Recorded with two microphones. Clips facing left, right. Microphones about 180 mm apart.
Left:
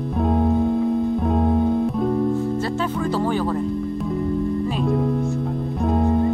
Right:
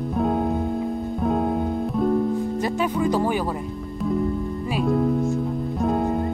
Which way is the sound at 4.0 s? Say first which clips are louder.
Right 2 dB; centre (ahead or behind).